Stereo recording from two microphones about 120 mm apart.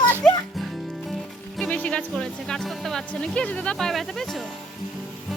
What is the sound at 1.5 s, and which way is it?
Speech, 10° left (ahead or behind).